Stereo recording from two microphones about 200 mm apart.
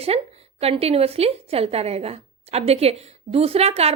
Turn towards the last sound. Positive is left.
turn(degrees=-30)  # may be behind; listen again after turning